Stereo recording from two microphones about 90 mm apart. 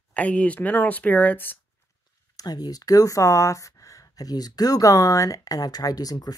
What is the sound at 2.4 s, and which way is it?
Speech, 45° left (ahead or behind).